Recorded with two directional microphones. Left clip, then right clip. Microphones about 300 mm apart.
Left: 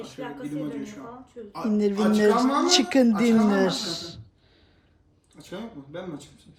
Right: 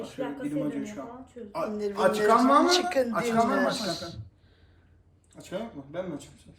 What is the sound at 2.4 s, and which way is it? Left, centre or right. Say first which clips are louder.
A man's voice: even; left.